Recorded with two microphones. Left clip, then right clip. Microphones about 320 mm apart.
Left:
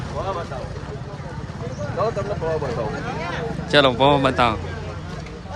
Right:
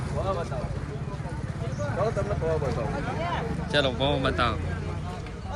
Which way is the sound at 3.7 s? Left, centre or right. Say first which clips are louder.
Left 10 dB; centre.